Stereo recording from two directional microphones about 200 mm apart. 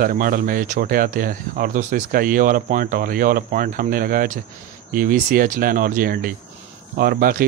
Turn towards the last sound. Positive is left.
turn(degrees=-45)  # may be behind; listen again after turning